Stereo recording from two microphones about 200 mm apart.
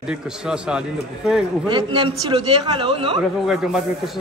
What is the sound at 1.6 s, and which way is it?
Speech, 25° right (ahead or behind).